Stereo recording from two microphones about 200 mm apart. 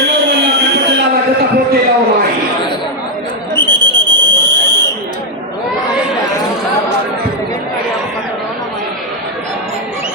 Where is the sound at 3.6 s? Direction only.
20° right (ahead or behind).